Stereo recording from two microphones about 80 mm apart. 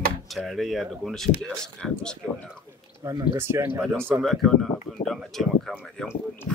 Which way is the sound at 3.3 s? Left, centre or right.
Right.